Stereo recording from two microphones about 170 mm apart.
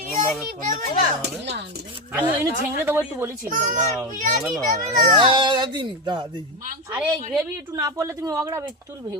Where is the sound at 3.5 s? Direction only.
45° right (ahead or behind).